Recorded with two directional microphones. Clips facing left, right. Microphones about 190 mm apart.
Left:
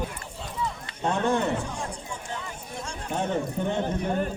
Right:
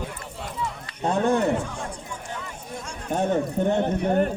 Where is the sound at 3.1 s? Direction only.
40° right (ahead or behind).